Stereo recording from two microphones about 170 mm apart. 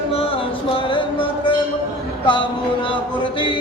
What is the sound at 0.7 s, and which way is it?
Music, 30° left (ahead or behind).